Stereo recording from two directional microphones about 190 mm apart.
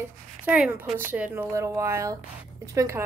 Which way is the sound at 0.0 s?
10° right (ahead or behind).